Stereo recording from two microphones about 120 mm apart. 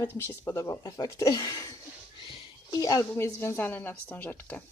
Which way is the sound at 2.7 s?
30° left (ahead or behind).